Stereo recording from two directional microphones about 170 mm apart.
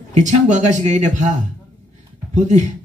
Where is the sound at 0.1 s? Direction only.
45° right (ahead or behind).